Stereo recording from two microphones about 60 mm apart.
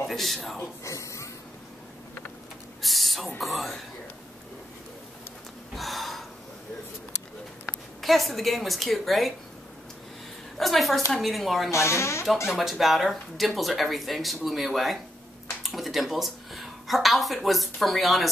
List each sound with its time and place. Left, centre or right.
0.0 s speech: centre
0.8 s a sound: left
2.8 s owl: centre
3.3 s speech: centre
5.8 s gasp: centre
8.0 s speech: centre
10.6 s speech: centre
11.7 s speech: left
12.4 s a woman's voice: centre